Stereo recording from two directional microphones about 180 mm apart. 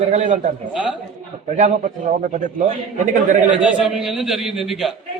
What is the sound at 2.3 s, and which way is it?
Speech, 40° right (ahead or behind).